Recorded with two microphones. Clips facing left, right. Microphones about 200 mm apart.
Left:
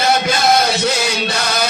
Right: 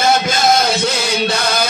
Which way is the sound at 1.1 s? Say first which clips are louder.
Right 3 dB; 55° right (ahead or behind).